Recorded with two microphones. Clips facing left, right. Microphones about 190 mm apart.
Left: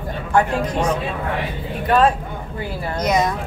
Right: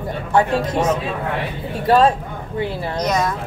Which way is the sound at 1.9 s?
30° right (ahead or behind).